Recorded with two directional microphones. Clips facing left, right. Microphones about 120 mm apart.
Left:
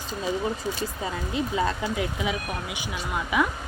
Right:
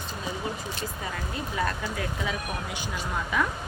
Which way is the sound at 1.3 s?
20° left (ahead or behind).